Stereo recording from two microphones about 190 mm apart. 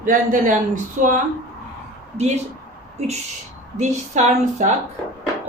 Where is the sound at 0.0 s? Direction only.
45° right (ahead or behind).